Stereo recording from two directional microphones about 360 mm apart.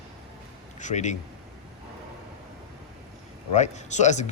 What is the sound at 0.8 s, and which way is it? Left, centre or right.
Speech, centre.